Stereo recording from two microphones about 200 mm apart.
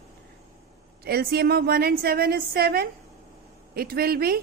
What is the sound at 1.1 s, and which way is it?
A woman's voice, 50° right (ahead or behind).